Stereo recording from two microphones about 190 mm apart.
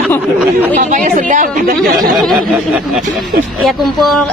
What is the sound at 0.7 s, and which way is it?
A woman's voice, 40° right (ahead or behind).